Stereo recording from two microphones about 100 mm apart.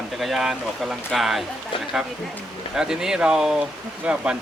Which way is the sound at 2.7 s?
5° right (ahead or behind).